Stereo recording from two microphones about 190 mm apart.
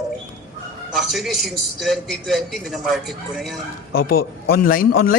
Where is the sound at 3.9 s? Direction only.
55° left (ahead or behind).